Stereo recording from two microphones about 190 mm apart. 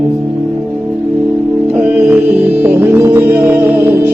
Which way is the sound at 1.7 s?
5° right (ahead or behind).